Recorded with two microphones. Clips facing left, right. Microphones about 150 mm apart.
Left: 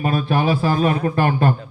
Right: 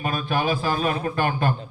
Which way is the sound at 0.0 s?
30° left (ahead or behind).